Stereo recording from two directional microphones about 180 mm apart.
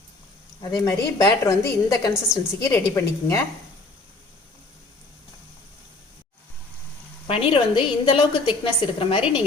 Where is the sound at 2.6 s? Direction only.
15° left (ahead or behind).